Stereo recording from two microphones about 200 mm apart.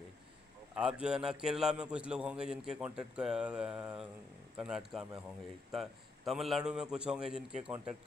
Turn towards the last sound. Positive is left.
turn(degrees=-5)  # may be behind; listen again after turning